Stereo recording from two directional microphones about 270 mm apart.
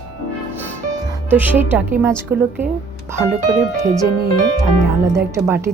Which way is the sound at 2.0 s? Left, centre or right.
Centre.